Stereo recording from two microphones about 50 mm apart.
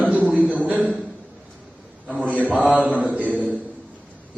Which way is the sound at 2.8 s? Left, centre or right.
Right.